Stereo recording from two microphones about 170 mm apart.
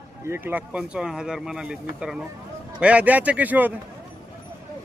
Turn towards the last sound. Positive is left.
turn(degrees=-10)  # may be behind; listen again after turning